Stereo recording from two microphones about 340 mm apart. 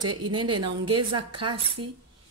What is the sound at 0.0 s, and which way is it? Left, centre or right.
Speech, right.